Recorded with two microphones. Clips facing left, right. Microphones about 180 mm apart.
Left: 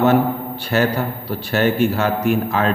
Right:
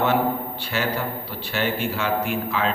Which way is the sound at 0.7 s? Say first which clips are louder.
Left 7 dB; 45° left (ahead or behind).